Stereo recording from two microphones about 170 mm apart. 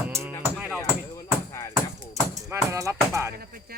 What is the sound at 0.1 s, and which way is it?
Music, 15° right (ahead or behind).